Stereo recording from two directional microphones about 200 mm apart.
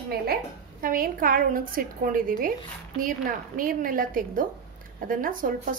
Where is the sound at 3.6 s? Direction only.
45° right (ahead or behind).